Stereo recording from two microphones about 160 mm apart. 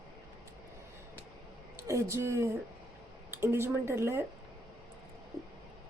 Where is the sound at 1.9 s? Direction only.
20° right (ahead or behind).